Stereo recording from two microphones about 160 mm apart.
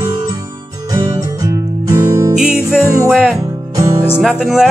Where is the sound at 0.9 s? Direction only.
20° right (ahead or behind).